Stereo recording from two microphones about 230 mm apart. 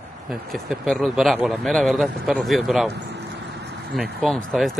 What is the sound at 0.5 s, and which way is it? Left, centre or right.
A man's voice, centre.